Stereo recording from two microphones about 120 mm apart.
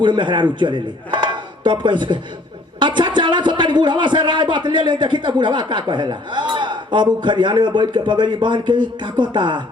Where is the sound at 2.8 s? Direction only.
40° right (ahead or behind).